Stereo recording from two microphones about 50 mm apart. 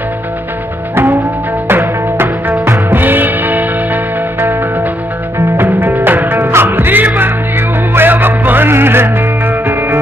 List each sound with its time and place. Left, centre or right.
1.7 s music: right